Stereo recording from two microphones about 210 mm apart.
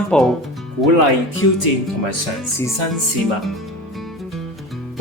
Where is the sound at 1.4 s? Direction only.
70° left (ahead or behind).